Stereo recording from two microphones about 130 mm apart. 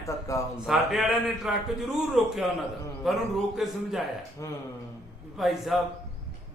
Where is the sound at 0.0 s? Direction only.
25° left (ahead or behind).